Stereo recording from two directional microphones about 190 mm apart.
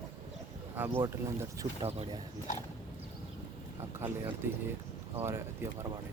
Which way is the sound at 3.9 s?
10° right (ahead or behind).